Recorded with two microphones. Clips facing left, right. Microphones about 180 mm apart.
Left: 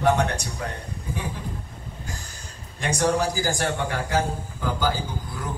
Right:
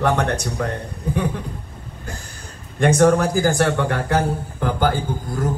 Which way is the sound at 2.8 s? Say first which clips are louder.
Right 8 dB; 55° right (ahead or behind).